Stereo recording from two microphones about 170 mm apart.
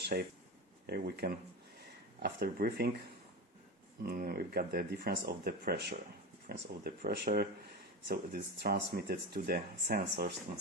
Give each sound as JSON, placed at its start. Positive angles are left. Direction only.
{"t": 0.1, "sound": "speech", "side_deg": -55}
{"t": 0.9, "sound": "speech", "side_deg": -70}
{"t": 4.0, "sound": "speech", "side_deg": -60}